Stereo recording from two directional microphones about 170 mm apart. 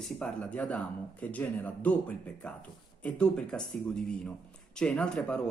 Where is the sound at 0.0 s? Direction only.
5° left (ahead or behind).